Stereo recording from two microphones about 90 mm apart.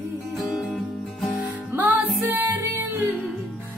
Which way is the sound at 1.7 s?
20° right (ahead or behind).